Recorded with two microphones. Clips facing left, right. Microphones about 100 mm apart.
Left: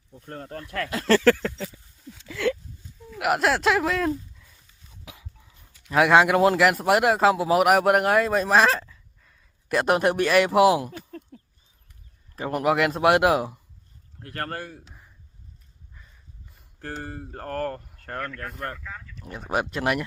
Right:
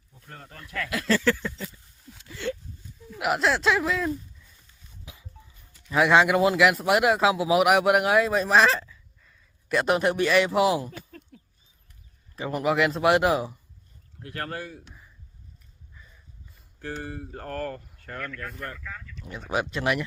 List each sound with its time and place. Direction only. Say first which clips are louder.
0.5 s speech: left 3 dB; 40° left (ahead or behind)
1.0 s a sound: left 6 dB; 70° left (ahead or behind); by 2.5 s 90° left
3.3 s speech: left 2 dB; 55° left (ahead or behind)
5.9 s a man's voice: left 2 dB; 55° left (ahead or behind)
8.9 s a sound: even; 55° left (ahead or behind)
12.4 s a man's voice: left 2 dB; 55° left (ahead or behind)
16.8 s a man's voice: even; 45° left (ahead or behind)
18.8 s speech: left 1 dB; 20° left (ahead or behind)
19.2 s speech: left 1 dB; centre (ahead or behind)
19.7 s a man's voice: left 1 dB; 50° left (ahead or behind)